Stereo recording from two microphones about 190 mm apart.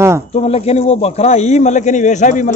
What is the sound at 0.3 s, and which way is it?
A man's voice, 35° left (ahead or behind).